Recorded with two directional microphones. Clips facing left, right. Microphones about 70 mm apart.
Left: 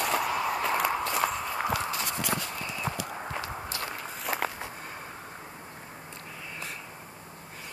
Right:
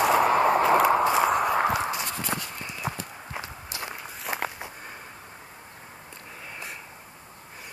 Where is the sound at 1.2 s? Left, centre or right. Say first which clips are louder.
Right 7 dB; right.